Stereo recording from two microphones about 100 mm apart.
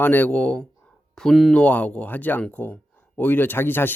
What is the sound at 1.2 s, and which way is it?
Speech, centre (ahead or behind).